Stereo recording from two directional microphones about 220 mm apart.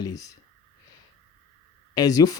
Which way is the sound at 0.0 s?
15° left (ahead or behind).